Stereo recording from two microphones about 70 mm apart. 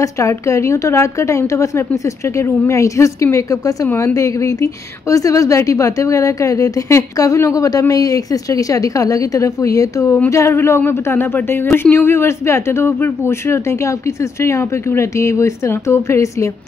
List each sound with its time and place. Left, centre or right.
0.0 s a woman's voice: left